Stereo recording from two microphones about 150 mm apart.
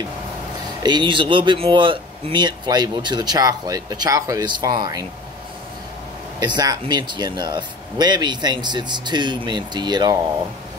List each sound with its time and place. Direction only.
0.8 s speech: 30° right (ahead or behind)
6.4 s speech: 25° right (ahead or behind)